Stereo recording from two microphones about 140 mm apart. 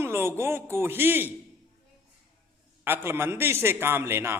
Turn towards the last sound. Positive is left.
turn(degrees=-15)  # may be behind; listen again after turning